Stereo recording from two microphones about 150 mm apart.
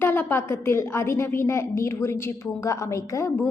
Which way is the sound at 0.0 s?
15° left (ahead or behind).